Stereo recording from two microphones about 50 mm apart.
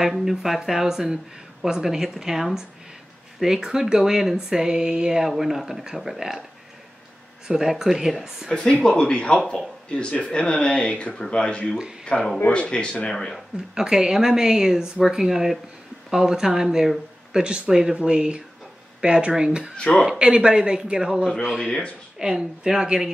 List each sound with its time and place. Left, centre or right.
0.0 s speech: centre
7.4 s speech: centre
8.9 s speech: centre
13.7 s speech: centre
21.5 s speech: centre
22.2 s speech: centre